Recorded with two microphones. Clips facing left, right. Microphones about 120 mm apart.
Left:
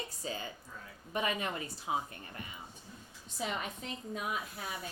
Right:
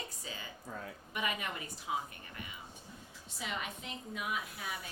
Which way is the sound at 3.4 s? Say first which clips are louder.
Left 3 dB; 40° left (ahead or behind).